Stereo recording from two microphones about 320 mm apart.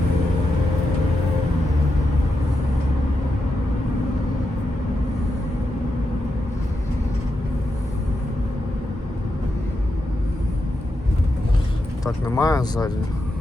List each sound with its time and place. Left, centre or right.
12.2 s speech: centre